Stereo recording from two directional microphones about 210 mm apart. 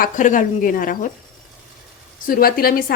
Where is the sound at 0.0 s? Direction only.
40° left (ahead or behind).